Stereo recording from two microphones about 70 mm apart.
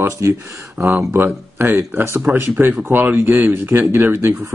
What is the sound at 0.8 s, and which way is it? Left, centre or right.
Speech, right.